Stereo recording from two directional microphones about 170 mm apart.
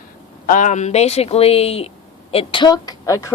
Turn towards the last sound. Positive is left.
turn(degrees=20)  # may be behind; listen again after turning